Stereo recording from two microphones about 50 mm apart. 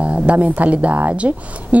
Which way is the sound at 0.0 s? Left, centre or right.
Right.